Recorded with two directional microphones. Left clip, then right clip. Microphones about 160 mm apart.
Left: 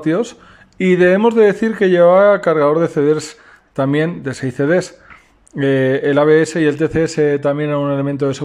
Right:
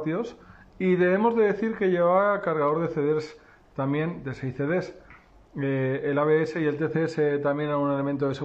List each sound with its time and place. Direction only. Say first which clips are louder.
0.0 s speech: left 12 dB; 30° left (ahead or behind)